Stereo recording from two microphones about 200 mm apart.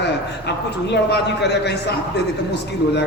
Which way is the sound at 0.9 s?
55° left (ahead or behind).